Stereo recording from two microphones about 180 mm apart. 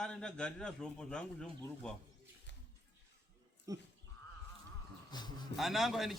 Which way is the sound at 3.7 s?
20° right (ahead or behind).